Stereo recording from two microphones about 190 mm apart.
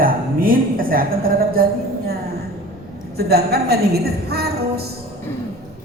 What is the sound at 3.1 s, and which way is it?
A woman's voice, 55° right (ahead or behind).